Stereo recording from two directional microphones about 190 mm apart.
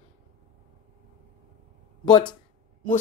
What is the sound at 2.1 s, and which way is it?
Speech, 25° left (ahead or behind).